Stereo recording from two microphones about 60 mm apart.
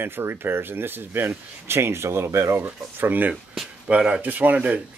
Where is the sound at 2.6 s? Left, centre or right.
Right.